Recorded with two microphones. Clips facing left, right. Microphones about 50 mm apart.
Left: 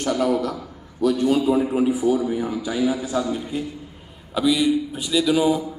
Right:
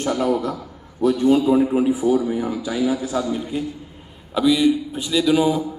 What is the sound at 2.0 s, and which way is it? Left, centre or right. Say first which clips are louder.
Speech: right 1 dB; right.